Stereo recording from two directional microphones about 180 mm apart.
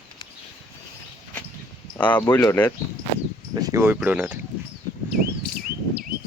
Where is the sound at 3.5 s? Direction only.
20° right (ahead or behind).